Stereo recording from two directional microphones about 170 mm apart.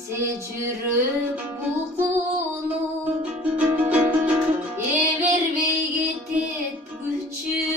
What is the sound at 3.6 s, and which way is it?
Music, 5° right (ahead or behind).